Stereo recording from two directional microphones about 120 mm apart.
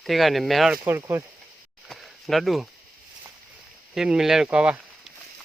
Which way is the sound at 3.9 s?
5° right (ahead or behind).